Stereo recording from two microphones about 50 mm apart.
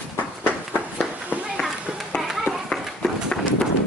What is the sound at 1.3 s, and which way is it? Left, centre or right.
Children playing, right.